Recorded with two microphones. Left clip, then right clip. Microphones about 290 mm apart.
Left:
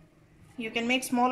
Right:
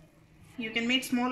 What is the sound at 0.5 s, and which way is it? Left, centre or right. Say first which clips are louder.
Speech: left 1 dB; centre.